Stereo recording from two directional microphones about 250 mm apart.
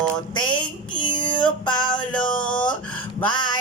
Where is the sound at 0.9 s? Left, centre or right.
Centre.